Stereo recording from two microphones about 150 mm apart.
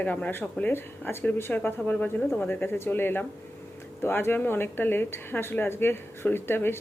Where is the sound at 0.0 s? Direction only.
10° left (ahead or behind).